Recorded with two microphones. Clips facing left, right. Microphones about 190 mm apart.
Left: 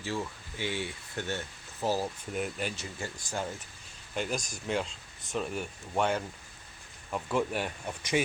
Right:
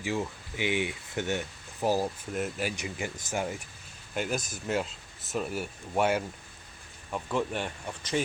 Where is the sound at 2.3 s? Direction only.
5° right (ahead or behind).